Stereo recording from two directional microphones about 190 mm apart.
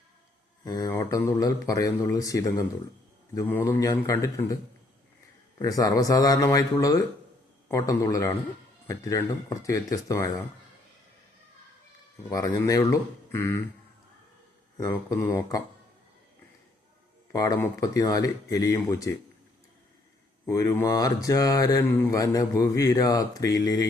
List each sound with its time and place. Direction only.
0.6 s speech: 20° left (ahead or behind)
5.5 s speech: 20° left (ahead or behind)
12.3 s speech: 20° left (ahead or behind)
14.8 s speech: 15° left (ahead or behind)
17.3 s speech: 20° left (ahead or behind)
20.5 s speech: 15° left (ahead or behind)